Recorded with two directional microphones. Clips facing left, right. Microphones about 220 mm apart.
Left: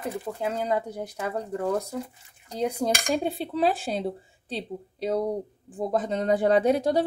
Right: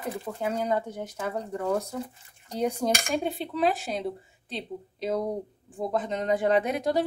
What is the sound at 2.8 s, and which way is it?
A woman's voice, 35° left (ahead or behind).